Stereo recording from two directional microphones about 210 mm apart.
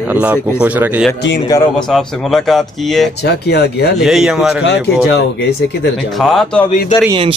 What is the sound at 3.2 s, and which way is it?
Speech, 50° left (ahead or behind).